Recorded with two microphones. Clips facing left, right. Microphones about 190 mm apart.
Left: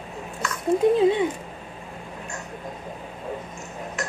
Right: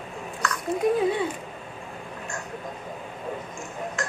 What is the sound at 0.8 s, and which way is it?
Speech, 25° left (ahead or behind).